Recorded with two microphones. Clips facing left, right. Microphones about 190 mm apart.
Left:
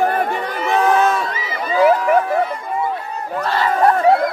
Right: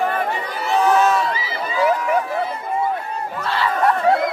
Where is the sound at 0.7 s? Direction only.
55° left (ahead or behind).